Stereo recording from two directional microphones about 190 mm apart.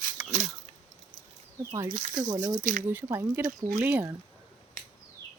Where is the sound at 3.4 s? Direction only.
45° right (ahead or behind).